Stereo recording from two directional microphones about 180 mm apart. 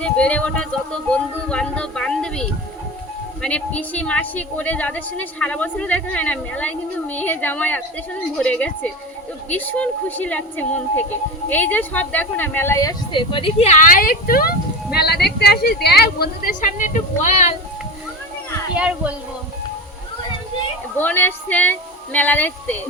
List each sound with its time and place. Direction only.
0.0 s a woman's voice: 5° left (ahead or behind); by 17.5 s 45° left (ahead or behind)
18.7 s speech: 5° right (ahead or behind)
21.0 s a woman's voice: 10° left (ahead or behind)